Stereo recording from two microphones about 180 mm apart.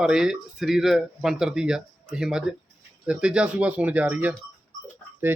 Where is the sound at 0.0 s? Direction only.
5° right (ahead or behind).